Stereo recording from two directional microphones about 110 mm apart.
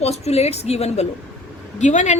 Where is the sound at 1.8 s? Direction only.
90° left.